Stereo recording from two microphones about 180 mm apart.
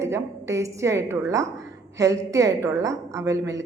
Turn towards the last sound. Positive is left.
turn(degrees=-20)  # may be behind; listen again after turning